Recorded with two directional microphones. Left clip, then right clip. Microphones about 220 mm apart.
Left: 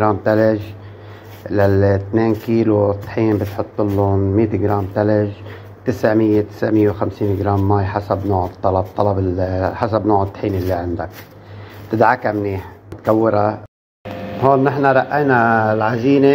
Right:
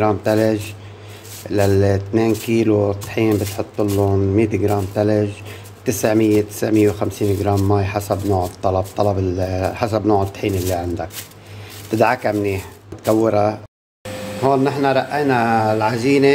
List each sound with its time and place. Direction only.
0.0 s speech: 20° right (ahead or behind)
14.4 s a man's voice: 5° right (ahead or behind)